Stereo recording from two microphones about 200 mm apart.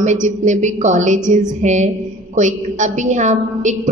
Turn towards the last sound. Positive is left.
turn(degrees=-35)  # may be behind; listen again after turning